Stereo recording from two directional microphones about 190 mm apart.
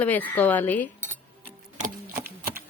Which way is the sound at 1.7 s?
45° right (ahead or behind).